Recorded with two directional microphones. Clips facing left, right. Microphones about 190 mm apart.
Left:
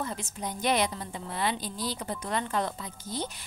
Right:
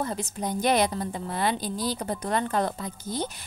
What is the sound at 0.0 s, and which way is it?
A woman's voice, 40° right (ahead or behind).